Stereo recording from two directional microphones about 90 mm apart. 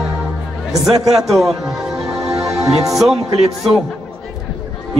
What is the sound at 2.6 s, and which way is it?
Speech, 40° right (ahead or behind).